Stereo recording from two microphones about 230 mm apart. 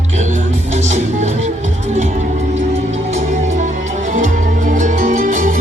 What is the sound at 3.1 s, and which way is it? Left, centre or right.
Music, right.